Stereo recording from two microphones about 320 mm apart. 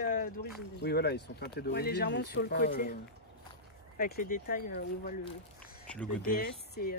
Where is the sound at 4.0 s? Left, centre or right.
Left.